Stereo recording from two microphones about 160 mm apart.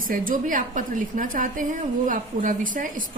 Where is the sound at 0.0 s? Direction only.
60° right (ahead or behind).